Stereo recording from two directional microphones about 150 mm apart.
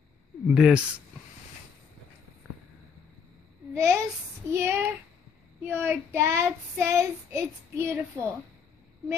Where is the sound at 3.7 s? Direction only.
20° right (ahead or behind).